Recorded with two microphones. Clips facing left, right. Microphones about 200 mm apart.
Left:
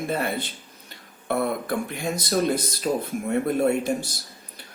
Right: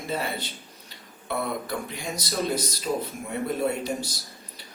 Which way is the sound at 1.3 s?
55° left (ahead or behind).